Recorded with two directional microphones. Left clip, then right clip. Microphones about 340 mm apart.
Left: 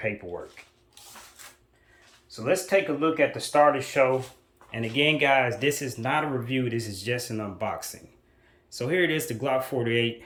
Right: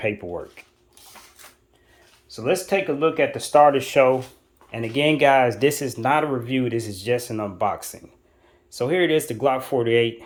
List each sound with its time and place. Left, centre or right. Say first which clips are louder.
0.0 s speech: right 5 dB; right
2.3 s speech: right 2 dB; right; by 10.2 s centre